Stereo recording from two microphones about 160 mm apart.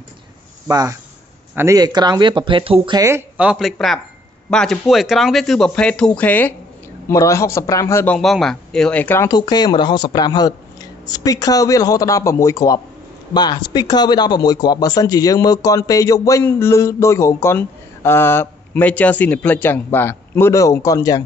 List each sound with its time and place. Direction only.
0.7 s speech: 20° right (ahead or behind)
3.1 s a man's voice: 10° right (ahead or behind); by 8.2 s 15° left (ahead or behind)
8.2 s speech: centre (ahead or behind)
9.3 s speech: 25° left (ahead or behind)